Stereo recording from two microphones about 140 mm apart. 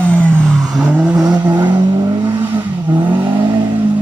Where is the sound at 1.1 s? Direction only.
25° right (ahead or behind).